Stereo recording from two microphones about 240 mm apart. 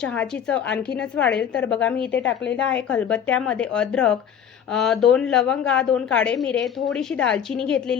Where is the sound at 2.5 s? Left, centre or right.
Centre.